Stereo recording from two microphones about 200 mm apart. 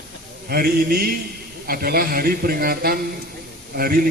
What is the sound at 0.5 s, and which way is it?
A man's voice, 50° right (ahead or behind).